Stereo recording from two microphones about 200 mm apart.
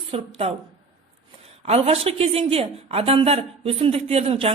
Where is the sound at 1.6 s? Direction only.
30° right (ahead or behind).